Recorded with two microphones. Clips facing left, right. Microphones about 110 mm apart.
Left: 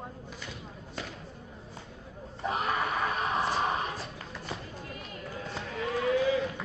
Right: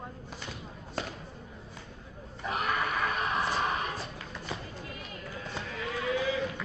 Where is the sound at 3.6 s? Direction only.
30° left (ahead or behind).